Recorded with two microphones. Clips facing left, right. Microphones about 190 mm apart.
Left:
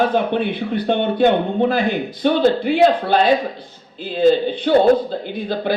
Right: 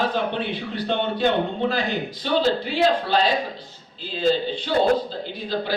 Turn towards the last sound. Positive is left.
turn(degrees=55)  # may be behind; listen again after turning